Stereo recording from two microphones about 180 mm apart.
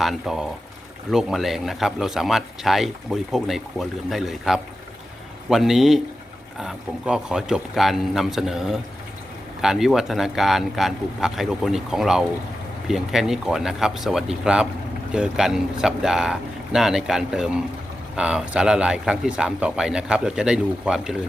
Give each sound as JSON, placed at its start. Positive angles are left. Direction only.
{"t": 0.0, "sound": "speech", "side_deg": 0}